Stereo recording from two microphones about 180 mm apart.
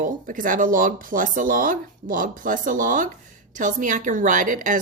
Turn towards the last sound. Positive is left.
turn(degrees=-45)  # may be behind; listen again after turning